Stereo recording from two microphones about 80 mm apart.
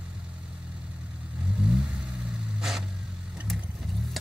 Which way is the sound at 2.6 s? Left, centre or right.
Centre.